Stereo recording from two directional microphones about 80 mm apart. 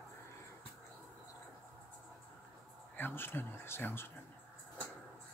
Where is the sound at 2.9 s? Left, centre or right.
Left.